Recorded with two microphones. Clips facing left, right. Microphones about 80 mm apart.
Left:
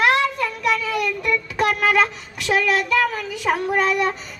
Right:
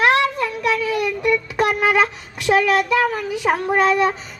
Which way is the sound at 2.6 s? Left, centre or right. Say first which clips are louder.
Even; centre.